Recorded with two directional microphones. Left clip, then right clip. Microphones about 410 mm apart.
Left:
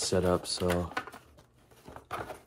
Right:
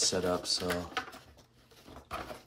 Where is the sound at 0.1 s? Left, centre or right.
Centre.